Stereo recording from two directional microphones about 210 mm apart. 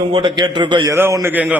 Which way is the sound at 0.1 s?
20° right (ahead or behind).